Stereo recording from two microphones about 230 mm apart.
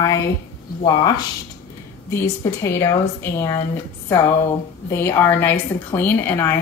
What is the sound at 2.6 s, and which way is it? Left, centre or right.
Speech, centre.